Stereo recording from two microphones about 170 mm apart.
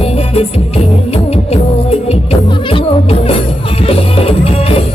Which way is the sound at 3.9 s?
35° left (ahead or behind).